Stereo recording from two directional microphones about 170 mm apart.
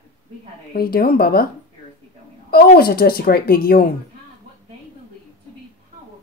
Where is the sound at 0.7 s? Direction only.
65° left (ahead or behind).